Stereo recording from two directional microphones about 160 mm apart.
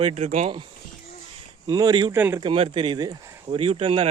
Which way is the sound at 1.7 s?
25° right (ahead or behind).